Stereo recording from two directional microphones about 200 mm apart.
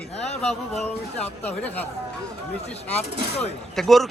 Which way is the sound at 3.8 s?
Centre (ahead or behind).